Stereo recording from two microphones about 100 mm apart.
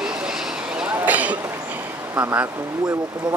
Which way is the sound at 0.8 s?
15° right (ahead or behind).